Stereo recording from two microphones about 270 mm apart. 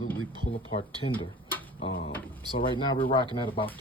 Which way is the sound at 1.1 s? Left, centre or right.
Centre.